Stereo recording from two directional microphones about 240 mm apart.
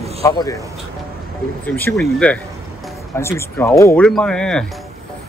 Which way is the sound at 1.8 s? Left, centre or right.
Centre.